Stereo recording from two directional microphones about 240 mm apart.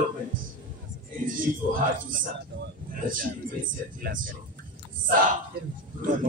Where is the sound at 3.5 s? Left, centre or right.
Right.